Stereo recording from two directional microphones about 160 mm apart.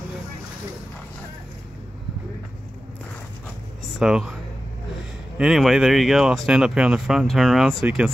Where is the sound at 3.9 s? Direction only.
5° right (ahead or behind).